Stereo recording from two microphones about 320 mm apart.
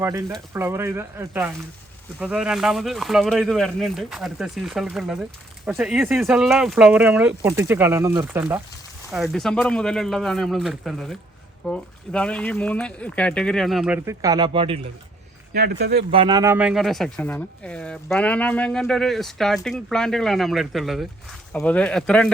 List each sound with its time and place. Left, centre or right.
0.0 s speech: centre
15.5 s speech: right
16.1 s speech: centre